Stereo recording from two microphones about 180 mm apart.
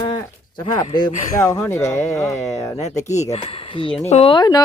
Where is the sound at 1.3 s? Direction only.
15° left (ahead or behind).